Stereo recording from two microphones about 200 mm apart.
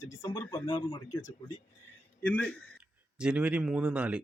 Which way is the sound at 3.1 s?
5° right (ahead or behind).